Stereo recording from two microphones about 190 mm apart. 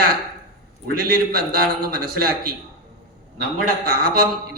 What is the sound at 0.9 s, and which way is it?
A man's voice, 50° right (ahead or behind).